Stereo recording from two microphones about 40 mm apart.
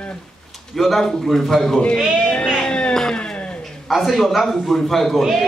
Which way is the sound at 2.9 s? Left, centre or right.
Centre.